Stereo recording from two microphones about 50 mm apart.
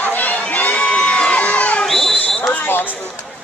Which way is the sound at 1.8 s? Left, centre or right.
Centre.